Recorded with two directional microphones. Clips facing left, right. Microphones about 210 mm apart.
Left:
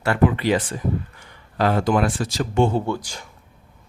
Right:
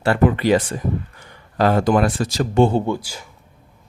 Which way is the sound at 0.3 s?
45° right (ahead or behind).